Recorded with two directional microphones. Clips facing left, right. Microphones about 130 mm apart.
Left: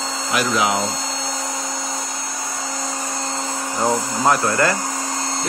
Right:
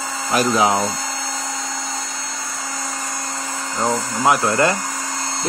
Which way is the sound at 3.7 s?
15° left (ahead or behind).